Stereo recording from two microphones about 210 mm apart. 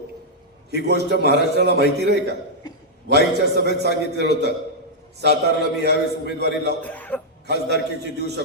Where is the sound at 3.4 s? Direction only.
50° right (ahead or behind).